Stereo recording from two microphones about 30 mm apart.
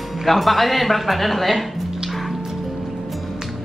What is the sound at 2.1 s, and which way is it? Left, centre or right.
Music, centre.